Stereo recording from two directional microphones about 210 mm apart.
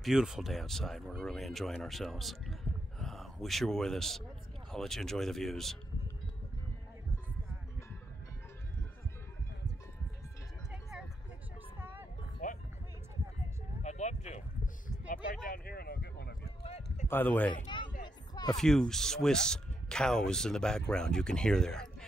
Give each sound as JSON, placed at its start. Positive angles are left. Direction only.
{"t": 0.0, "sound": "speech", "side_deg": 0}
{"t": 10.7, "sound": "vehicle", "side_deg": -5}
{"t": 11.8, "sound": "music", "side_deg": -10}
{"t": 12.4, "sound": "music", "side_deg": 40}
{"t": 13.8, "sound": "a sound", "side_deg": 35}
{"t": 15.4, "sound": "a sound", "side_deg": 45}
{"t": 16.4, "sound": "clip-clop", "side_deg": 30}
{"t": 17.1, "sound": "speech", "side_deg": 10}
{"t": 18.0, "sound": "music", "side_deg": 20}
{"t": 18.6, "sound": "speech", "side_deg": 0}